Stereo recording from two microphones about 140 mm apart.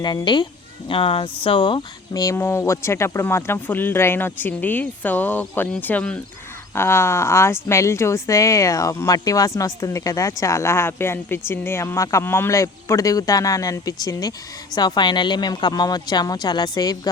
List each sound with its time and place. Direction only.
0.0 s speech: 30° left (ahead or behind)